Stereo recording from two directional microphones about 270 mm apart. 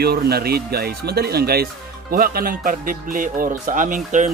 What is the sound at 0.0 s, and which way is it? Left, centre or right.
A man's voice, right.